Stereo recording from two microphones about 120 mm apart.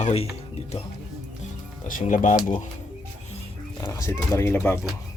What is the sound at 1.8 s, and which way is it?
Speech, 90° left.